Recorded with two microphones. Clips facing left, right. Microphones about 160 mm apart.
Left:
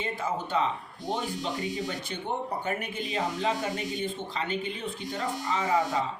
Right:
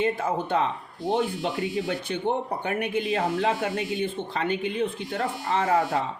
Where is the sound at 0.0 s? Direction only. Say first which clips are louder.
Right 6 dB; 60° right (ahead or behind).